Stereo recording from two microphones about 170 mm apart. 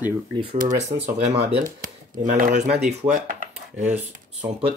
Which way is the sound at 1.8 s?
55° right (ahead or behind).